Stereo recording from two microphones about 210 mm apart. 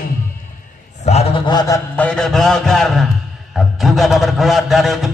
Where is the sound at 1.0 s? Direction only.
25° left (ahead or behind).